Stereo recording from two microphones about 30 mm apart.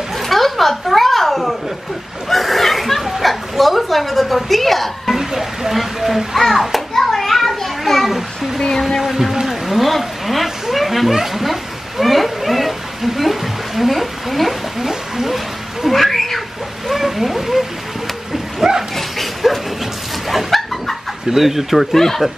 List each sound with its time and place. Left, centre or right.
0.2 s children playing: centre
2.2 s a sound: centre
5.1 s a child's voice: centre
6.9 s children playing: centre
8.5 s speech: centre
9.3 s a sound: centre
14.9 s roaring cats: centre
15.9 s cat: centre
16.8 s wild animals: centre
18.6 s dog: centre
18.9 s dog: centre
20.2 s a sound: centre
21.4 s speech: centre
21.9 s speech: centre